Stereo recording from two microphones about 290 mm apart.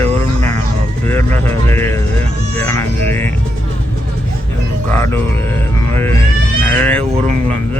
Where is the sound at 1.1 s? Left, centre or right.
Centre.